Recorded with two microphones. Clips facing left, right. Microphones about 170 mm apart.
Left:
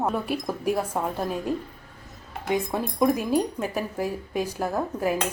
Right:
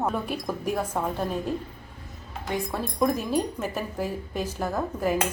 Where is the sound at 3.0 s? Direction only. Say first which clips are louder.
Left 2 dB; 10° left (ahead or behind).